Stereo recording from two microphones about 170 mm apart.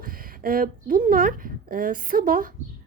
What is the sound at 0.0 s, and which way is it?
A woman's voice, 60° right (ahead or behind).